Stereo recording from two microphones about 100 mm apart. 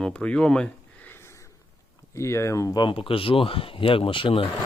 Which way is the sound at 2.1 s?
30° left (ahead or behind).